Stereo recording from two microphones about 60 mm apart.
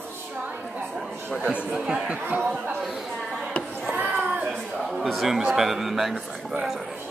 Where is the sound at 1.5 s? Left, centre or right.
Centre.